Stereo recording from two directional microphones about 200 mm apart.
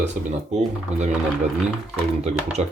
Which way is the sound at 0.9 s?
35° right (ahead or behind).